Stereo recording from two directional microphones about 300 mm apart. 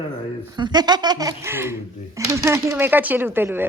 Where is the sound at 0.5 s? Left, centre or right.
Centre.